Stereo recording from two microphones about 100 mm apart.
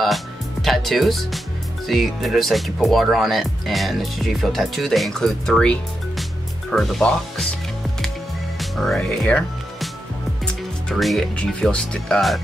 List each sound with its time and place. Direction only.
0.0 s speech: centre (ahead or behind)
8.5 s speech: 5° left (ahead or behind)
10.4 s music: 5° left (ahead or behind)
11.3 s speech: 10° left (ahead or behind)